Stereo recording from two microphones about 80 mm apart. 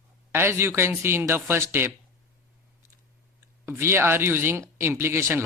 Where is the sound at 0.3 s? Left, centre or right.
Right.